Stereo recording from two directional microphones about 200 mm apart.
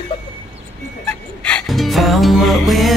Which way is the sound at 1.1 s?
5° left (ahead or behind).